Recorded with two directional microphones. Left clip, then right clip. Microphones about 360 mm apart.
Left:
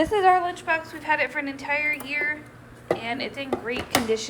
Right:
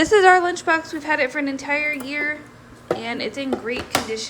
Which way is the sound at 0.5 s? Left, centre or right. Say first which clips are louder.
Right 5 dB; centre.